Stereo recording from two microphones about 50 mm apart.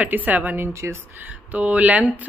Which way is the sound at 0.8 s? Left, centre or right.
Right.